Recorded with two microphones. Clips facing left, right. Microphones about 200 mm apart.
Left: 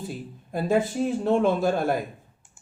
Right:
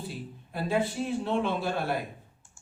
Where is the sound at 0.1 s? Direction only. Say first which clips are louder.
Left 6 dB; 45° left (ahead or behind).